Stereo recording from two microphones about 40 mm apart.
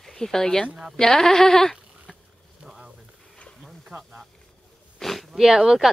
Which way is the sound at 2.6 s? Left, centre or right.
Centre.